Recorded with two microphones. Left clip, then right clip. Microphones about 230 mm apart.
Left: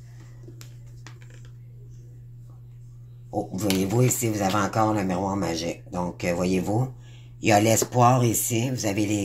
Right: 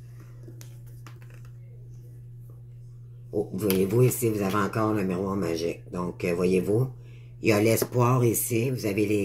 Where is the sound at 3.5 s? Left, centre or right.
Left.